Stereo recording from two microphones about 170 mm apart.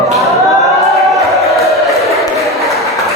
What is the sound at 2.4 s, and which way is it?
Applause, centre (ahead or behind).